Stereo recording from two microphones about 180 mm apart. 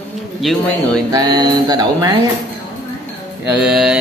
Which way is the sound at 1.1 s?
25° right (ahead or behind).